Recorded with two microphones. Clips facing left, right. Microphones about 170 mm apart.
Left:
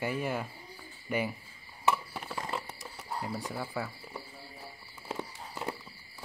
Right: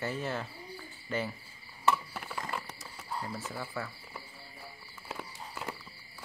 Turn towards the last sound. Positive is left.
turn(degrees=20)  # may be behind; listen again after turning